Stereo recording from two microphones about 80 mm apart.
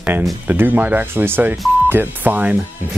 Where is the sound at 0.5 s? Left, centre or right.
Right.